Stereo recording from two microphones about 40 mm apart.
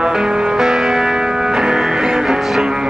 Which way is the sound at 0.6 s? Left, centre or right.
Centre.